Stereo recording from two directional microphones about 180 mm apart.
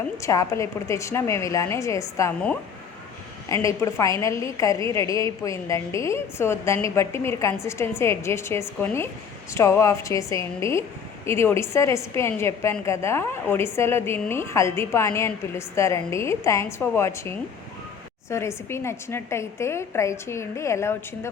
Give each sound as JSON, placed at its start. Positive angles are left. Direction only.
{"t": 0.2, "sound": "a woman's voice", "side_deg": 15}
{"t": 3.5, "sound": "a woman's voice", "side_deg": 15}